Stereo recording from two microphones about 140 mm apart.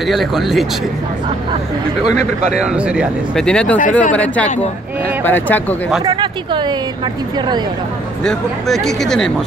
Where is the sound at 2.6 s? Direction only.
5° right (ahead or behind).